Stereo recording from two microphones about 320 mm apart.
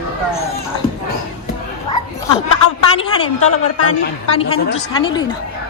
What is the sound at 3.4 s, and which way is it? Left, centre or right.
Speech, left.